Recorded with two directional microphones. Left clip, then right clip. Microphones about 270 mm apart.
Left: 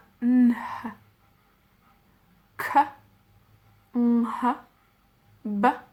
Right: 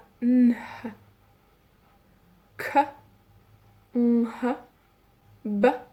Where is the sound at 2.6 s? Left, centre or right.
Centre.